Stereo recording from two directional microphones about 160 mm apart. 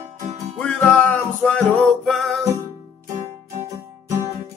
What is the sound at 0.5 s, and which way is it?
Music, 10° left (ahead or behind).